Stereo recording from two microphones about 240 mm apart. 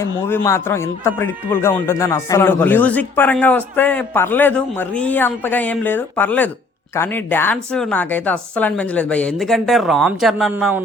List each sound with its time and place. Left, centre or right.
0.0 s a woman's voice: centre